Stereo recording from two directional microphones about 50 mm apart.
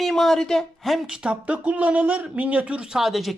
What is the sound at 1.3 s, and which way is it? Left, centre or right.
Speech, right.